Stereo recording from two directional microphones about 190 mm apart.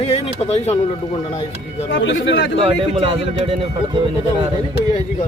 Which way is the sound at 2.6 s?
30° right (ahead or behind).